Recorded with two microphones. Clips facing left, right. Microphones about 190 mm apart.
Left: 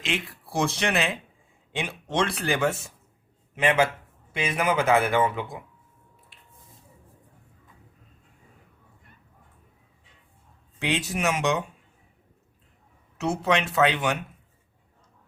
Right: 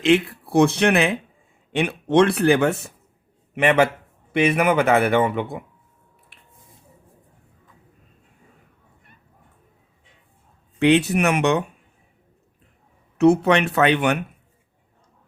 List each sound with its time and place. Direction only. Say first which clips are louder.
0.0 s a man's voice: right 14 dB; 60° right (ahead or behind)
10.8 s a man's voice: right 11 dB; 65° right (ahead or behind)
13.1 s a man's voice: right 9 dB; 60° right (ahead or behind)